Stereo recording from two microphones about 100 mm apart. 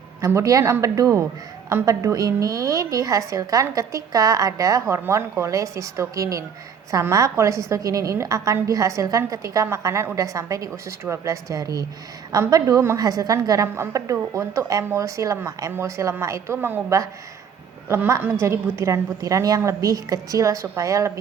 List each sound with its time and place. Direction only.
0.2 s a woman's voice: 30° right (ahead or behind)